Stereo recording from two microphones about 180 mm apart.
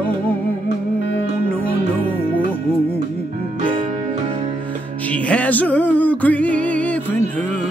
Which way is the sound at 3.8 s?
35° right (ahead or behind).